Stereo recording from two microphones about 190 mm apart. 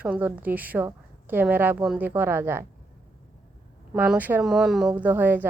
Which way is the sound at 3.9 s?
5° right (ahead or behind).